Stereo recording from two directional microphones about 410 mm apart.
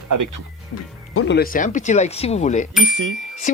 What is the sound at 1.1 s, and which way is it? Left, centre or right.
Speech, left.